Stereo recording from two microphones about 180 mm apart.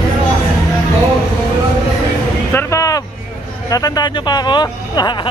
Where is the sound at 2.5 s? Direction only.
20° left (ahead or behind).